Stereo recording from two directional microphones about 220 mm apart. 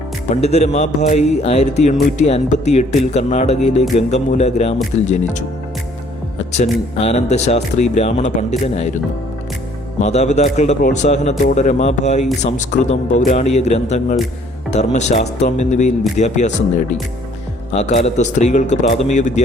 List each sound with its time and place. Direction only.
0.3 s speech: 30° left (ahead or behind)
6.5 s speech: 30° left (ahead or behind)
10.0 s speech: 30° left (ahead or behind)